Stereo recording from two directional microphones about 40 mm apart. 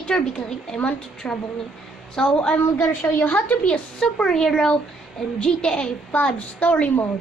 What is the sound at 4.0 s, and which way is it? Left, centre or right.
A woman's voice, left.